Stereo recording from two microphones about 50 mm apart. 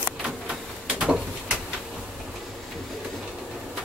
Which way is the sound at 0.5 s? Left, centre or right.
Centre.